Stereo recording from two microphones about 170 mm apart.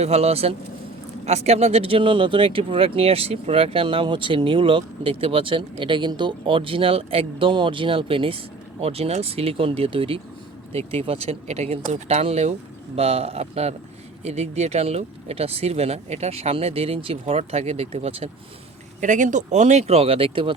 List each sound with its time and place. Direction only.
0.0 s speech: 40° right (ahead or behind)
18.9 s speech: 45° right (ahead or behind); by 20.5 s 30° right (ahead or behind)